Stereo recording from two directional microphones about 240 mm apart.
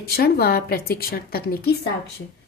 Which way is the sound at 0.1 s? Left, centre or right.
Left.